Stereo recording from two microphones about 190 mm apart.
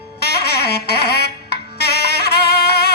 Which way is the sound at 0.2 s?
60° left (ahead or behind).